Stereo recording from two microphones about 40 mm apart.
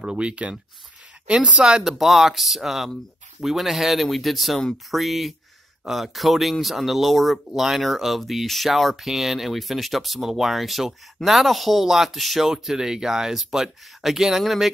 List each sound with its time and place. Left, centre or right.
0.0 s speech: right
1.6 s speech: centre
12.7 s speech: centre